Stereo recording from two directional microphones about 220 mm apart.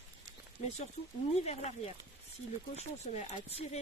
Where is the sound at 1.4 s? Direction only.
30° left (ahead or behind).